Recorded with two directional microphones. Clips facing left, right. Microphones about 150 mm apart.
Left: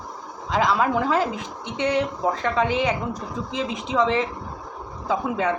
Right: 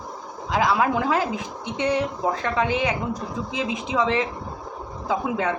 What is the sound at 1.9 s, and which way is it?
Speech, centre (ahead or behind).